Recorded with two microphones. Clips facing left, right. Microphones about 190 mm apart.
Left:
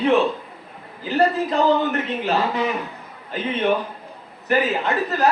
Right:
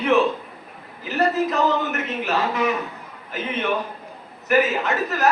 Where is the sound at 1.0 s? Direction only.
30° left (ahead or behind).